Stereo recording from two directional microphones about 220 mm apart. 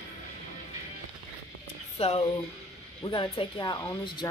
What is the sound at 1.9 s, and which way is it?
Speech, 25° left (ahead or behind).